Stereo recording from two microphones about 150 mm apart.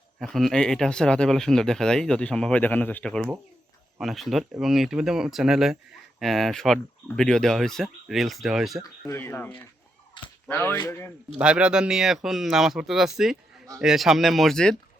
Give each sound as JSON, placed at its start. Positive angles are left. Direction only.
{"t": 0.2, "sound": "speech", "side_deg": 0}
{"t": 8.8, "sound": "speech", "side_deg": 15}
{"t": 11.3, "sound": "speech", "side_deg": -5}